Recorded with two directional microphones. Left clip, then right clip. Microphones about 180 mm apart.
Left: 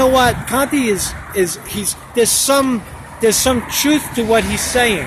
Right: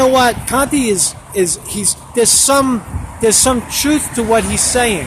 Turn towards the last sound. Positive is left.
turn(degrees=-10)  # may be behind; listen again after turning